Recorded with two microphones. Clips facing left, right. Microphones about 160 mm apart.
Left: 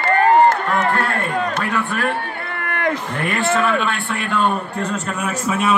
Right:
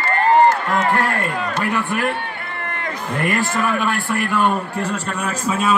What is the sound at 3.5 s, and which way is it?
A man's voice, 10° right (ahead or behind).